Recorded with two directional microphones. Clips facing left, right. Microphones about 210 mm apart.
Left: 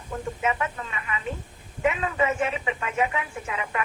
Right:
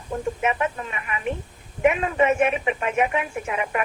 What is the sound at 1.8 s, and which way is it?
A woman's voice, 25° right (ahead or behind).